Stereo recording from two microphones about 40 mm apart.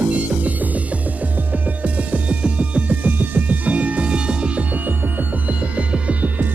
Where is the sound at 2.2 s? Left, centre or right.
Right.